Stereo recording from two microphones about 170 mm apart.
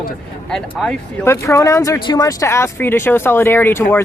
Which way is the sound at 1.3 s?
15° left (ahead or behind).